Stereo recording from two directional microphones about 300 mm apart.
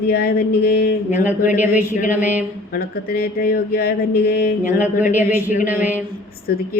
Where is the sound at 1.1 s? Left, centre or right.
Centre.